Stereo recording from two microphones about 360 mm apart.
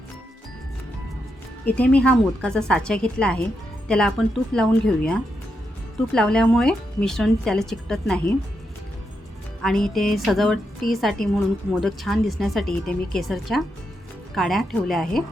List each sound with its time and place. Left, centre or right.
1.6 s a woman's voice: centre
9.6 s a woman's voice: centre